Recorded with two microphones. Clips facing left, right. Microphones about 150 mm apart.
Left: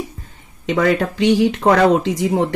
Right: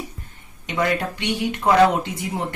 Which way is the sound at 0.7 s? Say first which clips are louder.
Left 6 dB; 90° left.